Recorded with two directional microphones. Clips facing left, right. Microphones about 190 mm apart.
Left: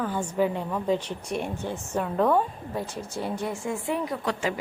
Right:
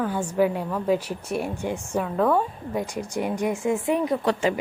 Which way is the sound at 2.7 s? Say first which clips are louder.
Right 5 dB; 15° right (ahead or behind).